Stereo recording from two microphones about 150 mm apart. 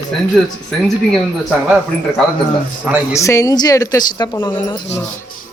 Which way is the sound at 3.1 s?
20° left (ahead or behind).